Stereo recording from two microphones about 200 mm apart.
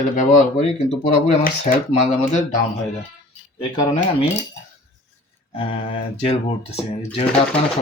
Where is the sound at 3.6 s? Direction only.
30° left (ahead or behind).